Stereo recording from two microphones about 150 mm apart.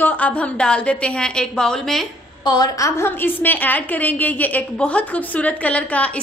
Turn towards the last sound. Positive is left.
turn(degrees=10)  # may be behind; listen again after turning